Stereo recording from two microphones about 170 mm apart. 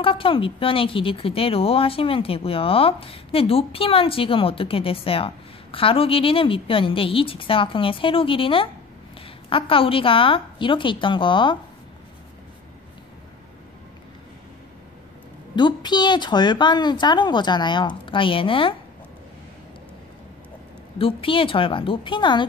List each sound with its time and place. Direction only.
0.0 s speech: 30° left (ahead or behind)
15.5 s a woman's voice: 25° left (ahead or behind)
21.0 s speech: 30° left (ahead or behind)